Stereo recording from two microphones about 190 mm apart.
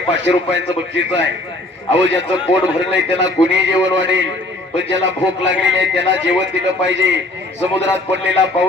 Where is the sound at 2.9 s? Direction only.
75° right (ahead or behind).